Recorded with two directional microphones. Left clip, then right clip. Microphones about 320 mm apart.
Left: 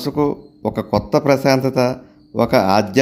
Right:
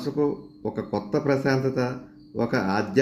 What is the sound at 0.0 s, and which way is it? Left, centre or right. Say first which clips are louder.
Speech: left 6 dB; left.